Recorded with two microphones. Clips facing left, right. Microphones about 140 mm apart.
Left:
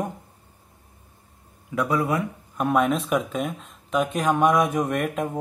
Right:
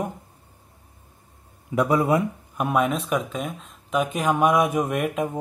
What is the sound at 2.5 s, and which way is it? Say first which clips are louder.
Speech: left 2 dB; 5° right (ahead or behind).